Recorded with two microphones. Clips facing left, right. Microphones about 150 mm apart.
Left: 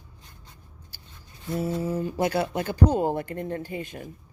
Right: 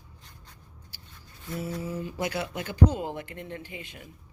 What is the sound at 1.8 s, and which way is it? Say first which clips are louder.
A woman's voice: left 6 dB; 40° left (ahead or behind).